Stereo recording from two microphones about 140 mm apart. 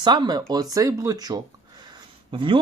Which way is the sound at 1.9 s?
35° right (ahead or behind).